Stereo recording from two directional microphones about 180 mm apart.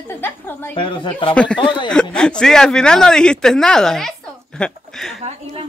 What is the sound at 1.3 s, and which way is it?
Speech, 5° left (ahead or behind).